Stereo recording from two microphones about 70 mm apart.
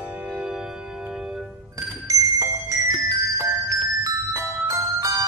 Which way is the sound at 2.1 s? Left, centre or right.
Right.